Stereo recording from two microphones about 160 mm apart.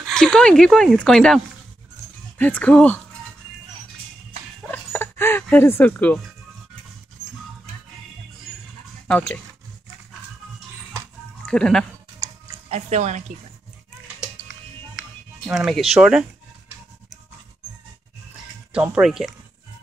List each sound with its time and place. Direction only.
0.0 s speech: 5° left (ahead or behind)
4.6 s music: 15° left (ahead or behind)
9.0 s speech: 10° left (ahead or behind)
11.4 s speech: 5° left (ahead or behind)
12.6 s speech: 45° right (ahead or behind)
15.0 s music: 5° right (ahead or behind)
16.0 s speech: 5° right (ahead or behind)
18.7 s speech: 5° right (ahead or behind)